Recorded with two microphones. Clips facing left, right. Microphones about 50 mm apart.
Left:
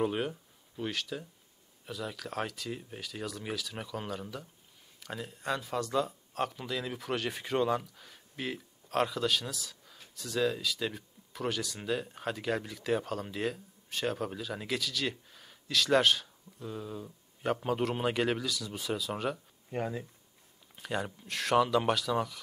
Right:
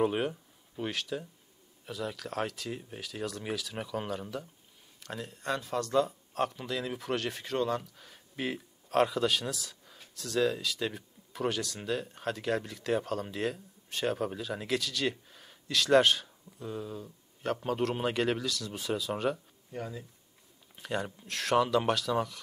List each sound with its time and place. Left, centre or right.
0.0 s speech: centre
7.8 s speech: centre
19.7 s speech: left
20.7 s speech: centre